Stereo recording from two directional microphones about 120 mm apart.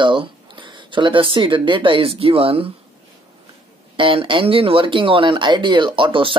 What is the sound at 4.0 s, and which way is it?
Speech, 45° right (ahead or behind).